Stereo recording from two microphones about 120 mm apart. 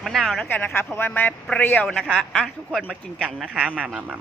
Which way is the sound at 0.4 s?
15° left (ahead or behind).